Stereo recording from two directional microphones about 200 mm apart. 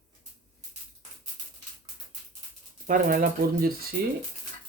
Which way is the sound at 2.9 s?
45° right (ahead or behind).